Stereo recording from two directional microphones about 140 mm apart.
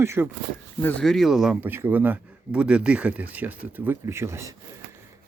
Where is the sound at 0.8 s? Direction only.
10° left (ahead or behind); by 4.6 s 20° right (ahead or behind).